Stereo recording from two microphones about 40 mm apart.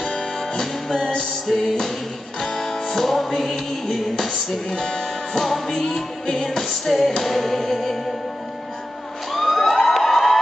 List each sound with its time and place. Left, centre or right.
0.0 s music: left
1.5 s music: centre
9.3 s emergency vehicle: centre